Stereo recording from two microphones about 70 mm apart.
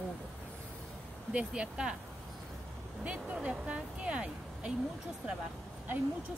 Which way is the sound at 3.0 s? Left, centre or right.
Centre.